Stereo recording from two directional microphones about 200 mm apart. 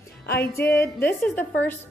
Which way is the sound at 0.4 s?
10° left (ahead or behind).